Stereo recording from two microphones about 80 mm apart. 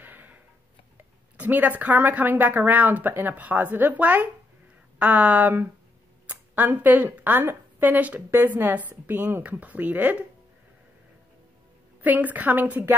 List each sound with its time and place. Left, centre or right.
0.0 s tick-tock: right
0.9 s speech: right
12.0 s speech: right